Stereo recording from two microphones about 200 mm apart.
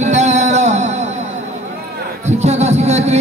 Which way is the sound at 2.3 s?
35° right (ahead or behind).